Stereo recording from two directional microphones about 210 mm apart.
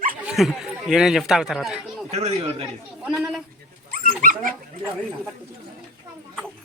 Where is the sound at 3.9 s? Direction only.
45° right (ahead or behind).